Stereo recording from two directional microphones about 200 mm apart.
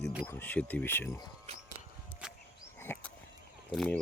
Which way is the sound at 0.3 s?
10° left (ahead or behind).